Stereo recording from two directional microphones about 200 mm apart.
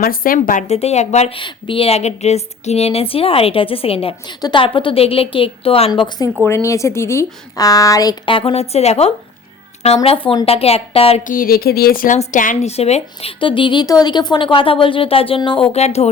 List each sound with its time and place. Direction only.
0.0 s a woman's voice: 45° left (ahead or behind); by 11.2 s 30° left (ahead or behind)
11.3 s a woman's voice: 45° left (ahead or behind)